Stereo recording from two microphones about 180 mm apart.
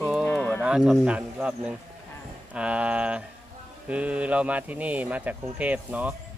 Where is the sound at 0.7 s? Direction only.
5° right (ahead or behind).